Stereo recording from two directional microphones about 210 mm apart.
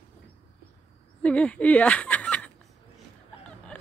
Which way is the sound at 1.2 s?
5° left (ahead or behind).